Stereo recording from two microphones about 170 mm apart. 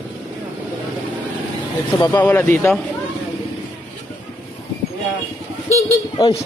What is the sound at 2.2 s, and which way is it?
Speech, 10° left (ahead or behind).